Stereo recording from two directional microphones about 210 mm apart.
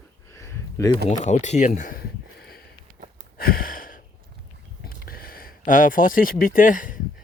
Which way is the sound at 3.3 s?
45° left (ahead or behind).